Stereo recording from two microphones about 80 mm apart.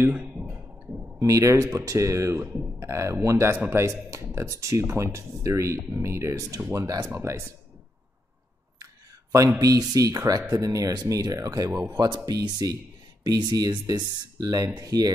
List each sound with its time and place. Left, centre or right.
0.0 s a sound: right
1.2 s speech: right
3.8 s speech: right
9.6 s speech: right
11.9 s speech: right